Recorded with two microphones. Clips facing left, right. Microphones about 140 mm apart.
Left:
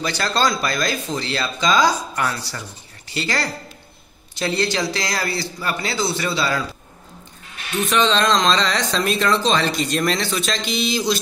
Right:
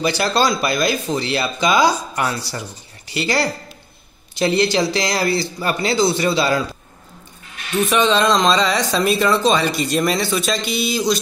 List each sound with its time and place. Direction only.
0.0 s speech: 10° right (ahead or behind)
7.9 s speech: 5° right (ahead or behind)